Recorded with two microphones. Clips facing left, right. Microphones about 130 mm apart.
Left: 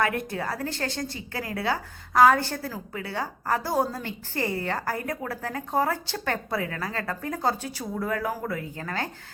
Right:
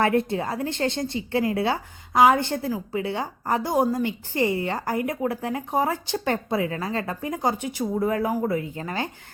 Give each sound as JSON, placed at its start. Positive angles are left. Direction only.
{"t": 0.0, "sound": "a woman's voice", "side_deg": -25}